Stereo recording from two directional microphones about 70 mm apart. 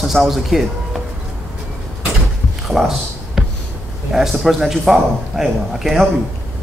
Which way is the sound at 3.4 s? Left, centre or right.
Centre.